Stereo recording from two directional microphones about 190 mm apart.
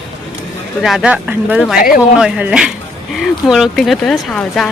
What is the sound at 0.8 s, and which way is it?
Speech, 5° right (ahead or behind).